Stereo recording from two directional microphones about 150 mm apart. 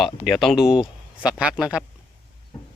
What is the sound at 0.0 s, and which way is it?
Speech, centre (ahead or behind).